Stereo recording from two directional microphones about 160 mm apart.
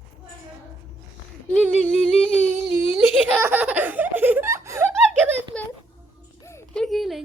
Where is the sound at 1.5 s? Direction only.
5° left (ahead or behind).